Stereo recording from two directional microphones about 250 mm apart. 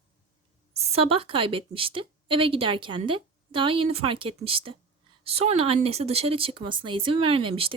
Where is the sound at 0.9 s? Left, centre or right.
Right.